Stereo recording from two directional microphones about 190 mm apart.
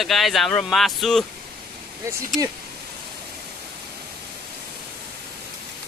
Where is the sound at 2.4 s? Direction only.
20° right (ahead or behind).